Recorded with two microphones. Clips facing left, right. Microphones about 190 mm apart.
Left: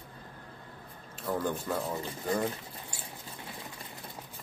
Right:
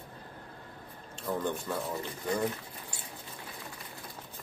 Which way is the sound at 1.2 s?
5° left (ahead or behind).